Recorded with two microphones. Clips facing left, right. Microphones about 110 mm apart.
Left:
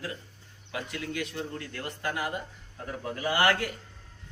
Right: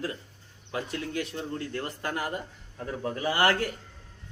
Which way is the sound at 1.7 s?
35° right (ahead or behind).